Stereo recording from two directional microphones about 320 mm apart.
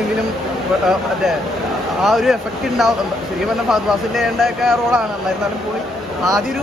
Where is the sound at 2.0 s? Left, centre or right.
Centre.